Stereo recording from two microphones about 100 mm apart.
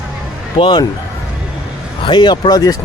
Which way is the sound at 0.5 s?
55° left (ahead or behind).